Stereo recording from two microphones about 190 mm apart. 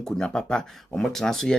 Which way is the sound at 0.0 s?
5° left (ahead or behind).